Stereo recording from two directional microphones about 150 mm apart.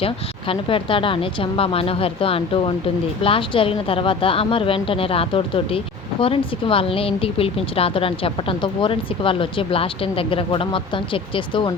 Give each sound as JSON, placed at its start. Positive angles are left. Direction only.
{"t": 0.0, "sound": "a woman's voice", "side_deg": 35}